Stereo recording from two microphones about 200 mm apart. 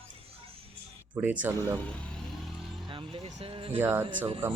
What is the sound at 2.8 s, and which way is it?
Speech, 25° right (ahead or behind).